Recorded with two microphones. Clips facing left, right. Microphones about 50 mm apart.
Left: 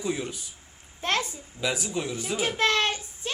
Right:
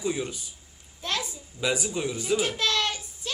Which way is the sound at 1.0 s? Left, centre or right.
Left.